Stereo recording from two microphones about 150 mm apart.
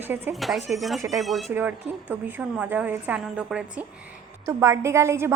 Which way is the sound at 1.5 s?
10° right (ahead or behind).